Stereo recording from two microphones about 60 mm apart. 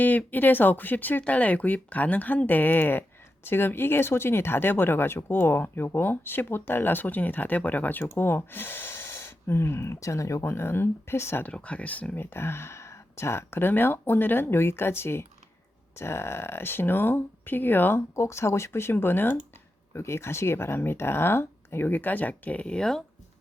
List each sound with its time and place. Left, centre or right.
0.0 s speech: left
11.4 s speech: left
12.2 s speech: left
18.2 s speech: left; by 23.0 s centre